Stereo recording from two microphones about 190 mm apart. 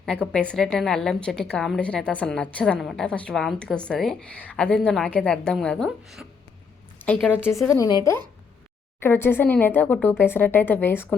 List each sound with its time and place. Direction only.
0.0 s a woman's voice: 5° left (ahead or behind)